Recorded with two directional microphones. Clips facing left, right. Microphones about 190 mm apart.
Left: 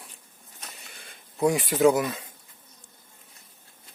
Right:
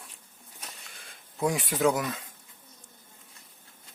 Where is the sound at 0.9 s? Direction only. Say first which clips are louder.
Left 2 dB; centre (ahead or behind).